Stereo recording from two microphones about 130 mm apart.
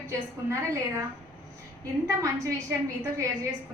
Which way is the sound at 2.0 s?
25° right (ahead or behind).